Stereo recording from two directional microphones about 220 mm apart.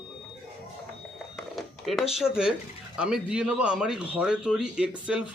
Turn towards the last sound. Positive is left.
turn(degrees=-5)  # may be behind; listen again after turning